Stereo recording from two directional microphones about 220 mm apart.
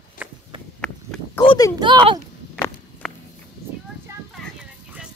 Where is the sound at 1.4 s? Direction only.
25° left (ahead or behind).